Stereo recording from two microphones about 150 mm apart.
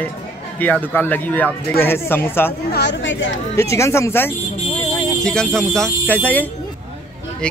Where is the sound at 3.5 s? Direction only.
20° left (ahead or behind).